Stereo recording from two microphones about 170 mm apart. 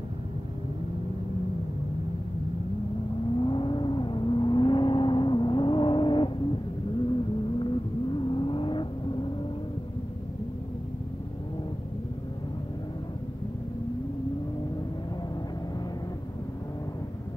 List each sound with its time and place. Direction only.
3.3 s vehicle: 30° left (ahead or behind)